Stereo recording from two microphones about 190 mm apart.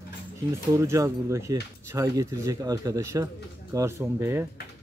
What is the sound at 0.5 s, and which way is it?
Speech, 15° right (ahead or behind).